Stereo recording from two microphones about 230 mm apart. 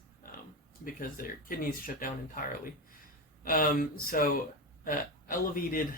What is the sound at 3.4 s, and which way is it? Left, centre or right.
Speech, left.